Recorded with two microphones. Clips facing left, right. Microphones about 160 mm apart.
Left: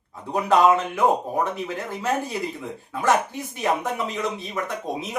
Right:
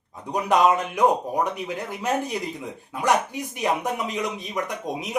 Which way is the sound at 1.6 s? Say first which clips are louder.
Left 1 dB; 15° right (ahead or behind).